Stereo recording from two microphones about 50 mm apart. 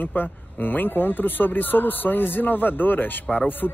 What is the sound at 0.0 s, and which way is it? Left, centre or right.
Speech, left.